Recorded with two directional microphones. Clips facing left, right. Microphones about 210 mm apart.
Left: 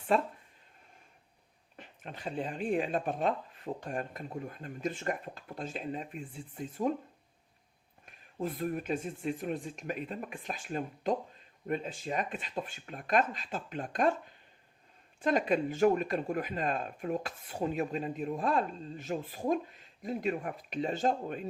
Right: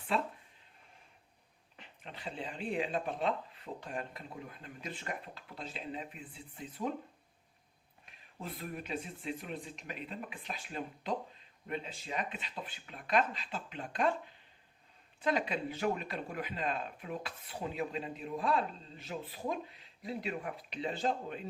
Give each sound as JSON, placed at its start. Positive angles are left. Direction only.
{"t": 0.1, "sound": "speech", "side_deg": 45}
{"t": 1.7, "sound": "speech", "side_deg": 50}
{"t": 8.0, "sound": "speech", "side_deg": 45}
{"t": 15.2, "sound": "speech", "side_deg": 45}